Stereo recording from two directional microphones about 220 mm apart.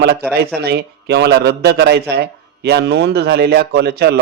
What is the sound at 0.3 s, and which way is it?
A man's voice, 45° right (ahead or behind).